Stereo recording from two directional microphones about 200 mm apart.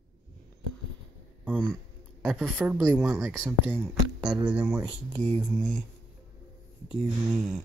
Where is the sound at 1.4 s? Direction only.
Centre (ahead or behind).